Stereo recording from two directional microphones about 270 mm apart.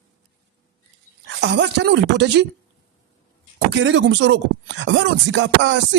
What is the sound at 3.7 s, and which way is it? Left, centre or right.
Speech, right.